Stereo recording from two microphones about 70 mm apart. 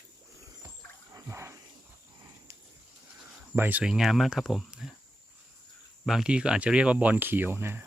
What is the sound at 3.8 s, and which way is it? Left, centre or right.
Speech, centre.